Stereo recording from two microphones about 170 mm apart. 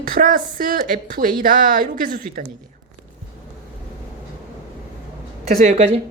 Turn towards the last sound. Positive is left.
turn(degrees=-40)  # may be behind; listen again after turning